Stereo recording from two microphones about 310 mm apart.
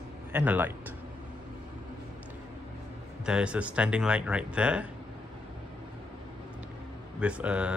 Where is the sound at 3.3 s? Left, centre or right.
Centre.